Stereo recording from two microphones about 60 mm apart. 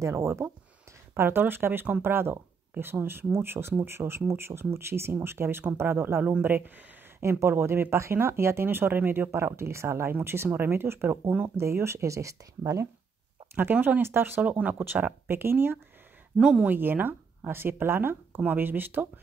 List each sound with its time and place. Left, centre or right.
0.0 s speech: right
7.2 s speech: right
9.3 s speech: right
13.6 s speech: right
14.4 s speech: right
16.3 s speech: centre
16.6 s speech: right